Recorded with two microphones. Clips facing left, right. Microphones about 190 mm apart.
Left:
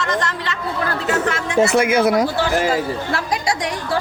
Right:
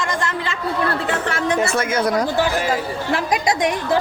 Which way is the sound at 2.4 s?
15° right (ahead or behind).